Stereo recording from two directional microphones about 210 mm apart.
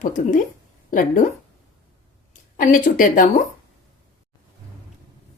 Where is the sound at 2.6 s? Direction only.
40° left (ahead or behind).